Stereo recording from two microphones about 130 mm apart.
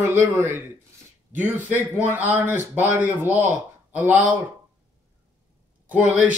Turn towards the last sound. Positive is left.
turn(degrees=-10)  # may be behind; listen again after turning